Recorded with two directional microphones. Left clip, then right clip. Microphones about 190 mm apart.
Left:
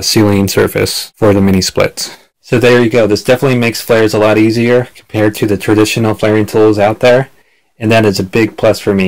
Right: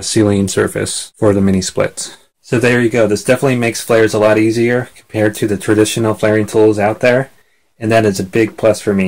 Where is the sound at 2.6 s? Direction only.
40° left (ahead or behind).